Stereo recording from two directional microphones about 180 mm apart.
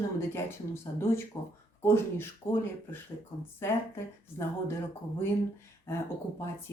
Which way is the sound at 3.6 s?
15° left (ahead or behind).